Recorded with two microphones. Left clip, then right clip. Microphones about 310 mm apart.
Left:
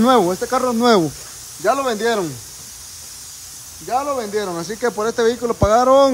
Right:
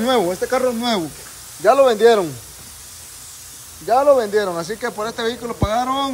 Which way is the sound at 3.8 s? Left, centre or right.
Centre.